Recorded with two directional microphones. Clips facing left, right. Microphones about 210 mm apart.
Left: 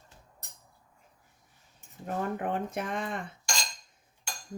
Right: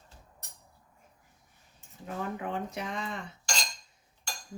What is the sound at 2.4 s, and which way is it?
Dishes, 50° left (ahead or behind).